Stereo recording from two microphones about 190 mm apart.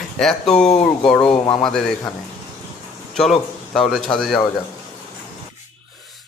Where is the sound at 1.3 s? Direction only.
30° left (ahead or behind).